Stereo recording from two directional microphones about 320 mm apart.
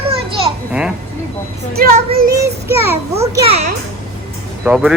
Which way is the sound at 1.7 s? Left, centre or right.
Right.